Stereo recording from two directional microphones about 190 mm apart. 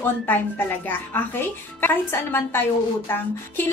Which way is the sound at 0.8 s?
10° left (ahead or behind).